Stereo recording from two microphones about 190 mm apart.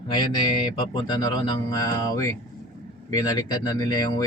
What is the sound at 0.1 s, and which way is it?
Speech, 25° left (ahead or behind).